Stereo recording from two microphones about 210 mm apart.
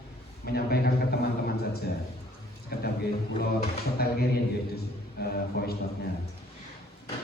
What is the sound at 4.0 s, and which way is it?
Speech, 50° left (ahead or behind).